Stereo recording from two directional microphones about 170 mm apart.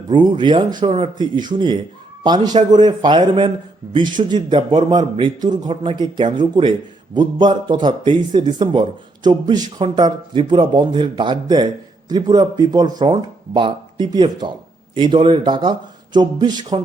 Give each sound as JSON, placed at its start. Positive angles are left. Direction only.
{"t": 0.1, "sound": "a man's voice", "side_deg": -25}